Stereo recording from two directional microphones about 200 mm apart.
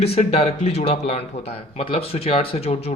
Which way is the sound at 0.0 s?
30° left (ahead or behind).